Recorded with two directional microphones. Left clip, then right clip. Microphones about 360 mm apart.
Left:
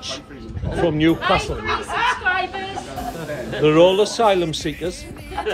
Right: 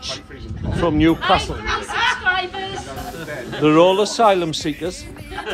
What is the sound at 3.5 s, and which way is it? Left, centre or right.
Speech, centre.